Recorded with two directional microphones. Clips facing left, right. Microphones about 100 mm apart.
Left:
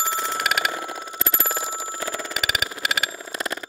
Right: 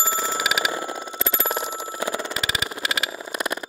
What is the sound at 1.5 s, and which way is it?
Alarm clock, 20° right (ahead or behind).